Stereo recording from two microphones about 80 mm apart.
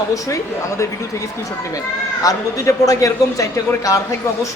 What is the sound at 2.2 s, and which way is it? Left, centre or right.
A man's voice, left.